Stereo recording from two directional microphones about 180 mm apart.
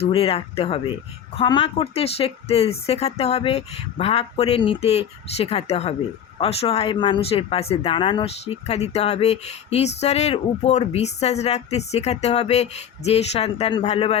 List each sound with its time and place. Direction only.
0.0 s speech: 35° left (ahead or behind)